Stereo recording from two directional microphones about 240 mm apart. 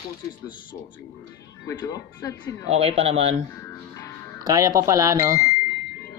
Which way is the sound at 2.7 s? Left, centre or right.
Right.